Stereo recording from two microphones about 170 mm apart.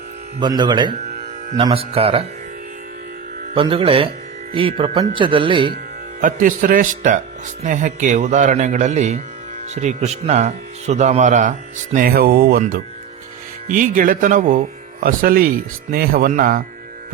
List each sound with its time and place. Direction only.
0.3 s speech: 25° right (ahead or behind)
3.5 s speech: 30° right (ahead or behind)
6.2 s speech: 50° right (ahead or behind)
11.9 s speech: 60° right (ahead or behind)